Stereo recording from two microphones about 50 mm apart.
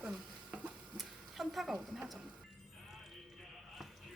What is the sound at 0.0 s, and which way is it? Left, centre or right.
Stir, right.